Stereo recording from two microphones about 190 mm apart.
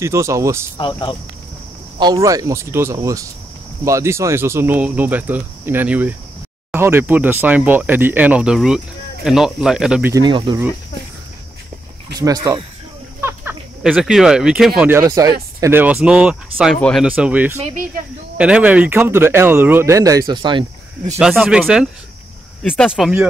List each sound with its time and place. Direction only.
0.0 s speech: 15° right (ahead or behind)
0.7 s speech: 25° left (ahead or behind)
2.0 s speech: 20° right (ahead or behind)
10.1 s speech: 25° right (ahead or behind)
12.2 s speech: 20° right (ahead or behind)
13.2 s a sound: 10° right (ahead or behind)
13.8 s speech: centre (ahead or behind); by 20.6 s 25° right (ahead or behind)
21.2 s speech: 5° right (ahead or behind)